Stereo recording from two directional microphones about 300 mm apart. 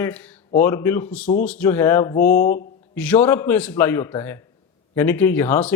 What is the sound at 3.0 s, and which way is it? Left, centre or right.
Speech, centre.